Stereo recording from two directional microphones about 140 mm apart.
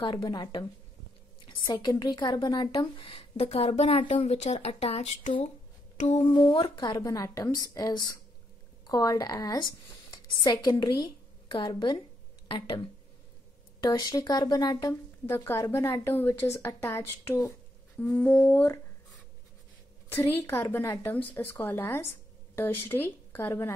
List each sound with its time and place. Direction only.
0.0 s a woman's voice: 35° left (ahead or behind); by 5.3 s 50° left (ahead or behind)
5.9 s a sound: 60° left (ahead or behind)
6.2 s a woman's voice: 35° left (ahead or behind)
13.8 s a woman's voice: 30° left (ahead or behind)
15.2 s a woman's voice: 15° left (ahead or behind)
20.3 s a woman's voice: 15° left (ahead or behind)